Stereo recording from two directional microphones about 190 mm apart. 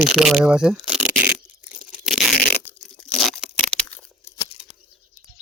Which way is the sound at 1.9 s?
5° right (ahead or behind).